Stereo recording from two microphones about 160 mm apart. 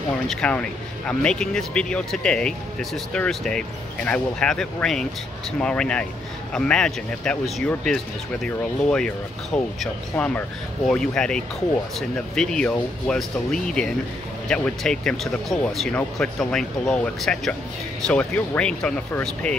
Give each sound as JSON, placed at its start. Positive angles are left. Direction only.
{"t": 0.3, "sound": "speech", "side_deg": 5}